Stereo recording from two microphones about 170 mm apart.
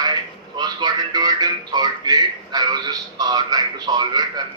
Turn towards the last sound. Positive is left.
turn(degrees=-25)  # may be behind; listen again after turning